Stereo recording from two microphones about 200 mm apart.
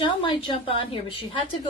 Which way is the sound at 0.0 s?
25° left (ahead or behind).